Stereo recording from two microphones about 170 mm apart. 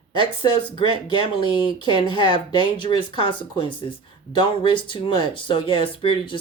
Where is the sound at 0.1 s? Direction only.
30° left (ahead or behind).